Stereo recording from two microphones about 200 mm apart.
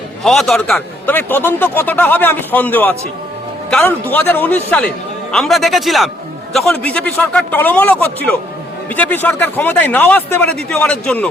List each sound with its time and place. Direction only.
0.2 s a man's voice: centre (ahead or behind)